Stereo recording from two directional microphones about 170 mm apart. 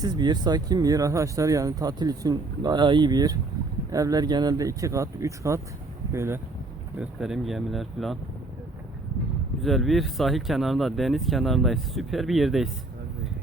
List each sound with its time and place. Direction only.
0.0 s speech: 25° right (ahead or behind)
7.0 s speech: 5° right (ahead or behind)
9.6 s speech: centre (ahead or behind)